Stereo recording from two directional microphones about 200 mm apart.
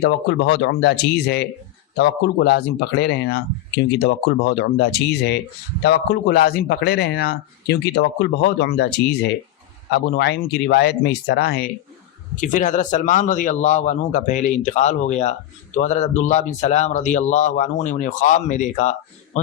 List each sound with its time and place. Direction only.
0.0 s a man's voice: 60° left (ahead or behind)
12.4 s a man's voice: 40° left (ahead or behind)